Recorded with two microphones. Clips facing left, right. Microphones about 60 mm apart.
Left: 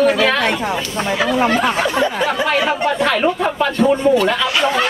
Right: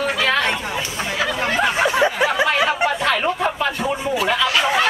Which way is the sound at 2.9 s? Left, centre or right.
Centre.